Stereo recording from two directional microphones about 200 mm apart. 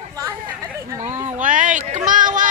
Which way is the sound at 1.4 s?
40° right (ahead or behind).